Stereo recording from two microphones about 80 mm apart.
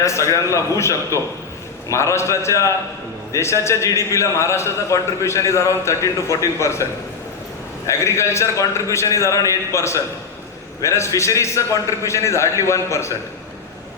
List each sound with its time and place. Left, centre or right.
0.0 s a man's voice: left
7.9 s a man's voice: left